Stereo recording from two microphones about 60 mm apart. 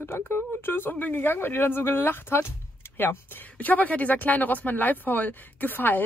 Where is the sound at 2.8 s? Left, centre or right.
Left.